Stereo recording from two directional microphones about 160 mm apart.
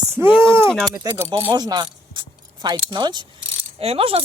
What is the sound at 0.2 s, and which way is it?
Speech, 15° right (ahead or behind).